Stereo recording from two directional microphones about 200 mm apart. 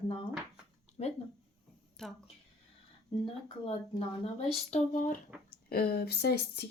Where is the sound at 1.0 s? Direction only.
35° left (ahead or behind).